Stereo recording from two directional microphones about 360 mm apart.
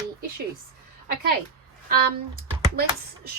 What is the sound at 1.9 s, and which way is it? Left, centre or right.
Speech, right.